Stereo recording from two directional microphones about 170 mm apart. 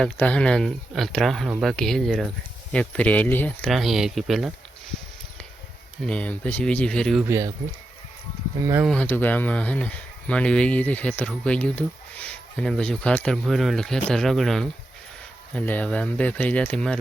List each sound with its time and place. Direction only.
0.0 s speech: 5° left (ahead or behind)
6.1 s speech: 5° left (ahead or behind)
7.3 s speech: 15° right (ahead or behind)
8.6 s speech: 15° right (ahead or behind)
8.9 s speech: 10° left (ahead or behind)